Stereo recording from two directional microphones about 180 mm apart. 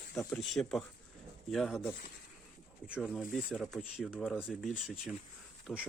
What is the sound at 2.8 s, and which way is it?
Speech, 5° right (ahead or behind).